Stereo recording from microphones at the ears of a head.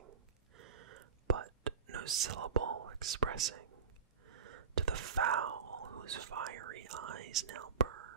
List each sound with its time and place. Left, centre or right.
0.0 s whispering: right